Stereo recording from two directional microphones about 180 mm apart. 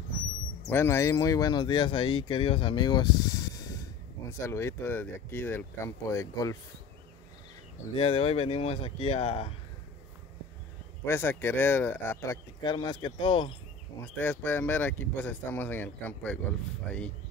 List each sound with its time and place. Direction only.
0.7 s speech: 15° left (ahead or behind)
7.9 s speech: 30° left (ahead or behind)
11.1 s speech: 10° left (ahead or behind)
14.0 s speech: 10° left (ahead or behind)